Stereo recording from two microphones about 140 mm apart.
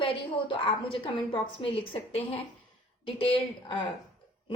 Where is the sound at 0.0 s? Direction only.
40° left (ahead or behind).